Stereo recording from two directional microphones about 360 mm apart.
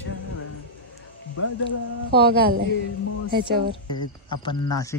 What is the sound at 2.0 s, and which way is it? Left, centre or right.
Speech, right.